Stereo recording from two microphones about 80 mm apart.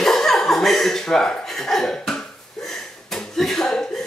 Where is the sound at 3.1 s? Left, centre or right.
Centre.